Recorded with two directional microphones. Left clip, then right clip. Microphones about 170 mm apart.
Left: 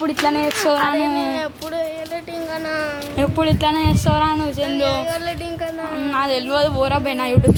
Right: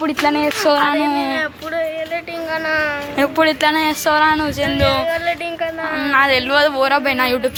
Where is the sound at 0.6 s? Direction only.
15° right (ahead or behind).